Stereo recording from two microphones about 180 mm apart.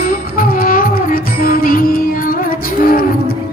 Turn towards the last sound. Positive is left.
turn(degrees=55)  # may be behind; listen again after turning